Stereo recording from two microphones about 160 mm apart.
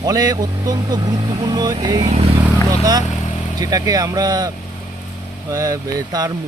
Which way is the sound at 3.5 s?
25° right (ahead or behind).